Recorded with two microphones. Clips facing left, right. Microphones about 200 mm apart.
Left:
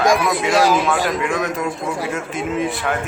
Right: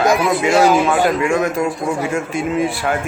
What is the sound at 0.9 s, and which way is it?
Speech, 50° right (ahead or behind).